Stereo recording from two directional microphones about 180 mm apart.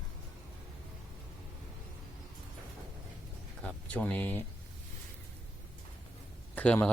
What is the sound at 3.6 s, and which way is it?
Speech, 5° left (ahead or behind).